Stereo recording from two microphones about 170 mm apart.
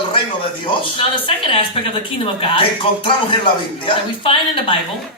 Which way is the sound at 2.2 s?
30° left (ahead or behind).